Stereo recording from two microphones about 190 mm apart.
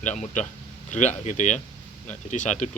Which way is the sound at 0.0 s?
40° left (ahead or behind).